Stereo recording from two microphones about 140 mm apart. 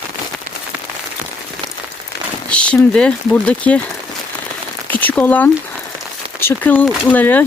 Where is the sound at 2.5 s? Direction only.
5° left (ahead or behind).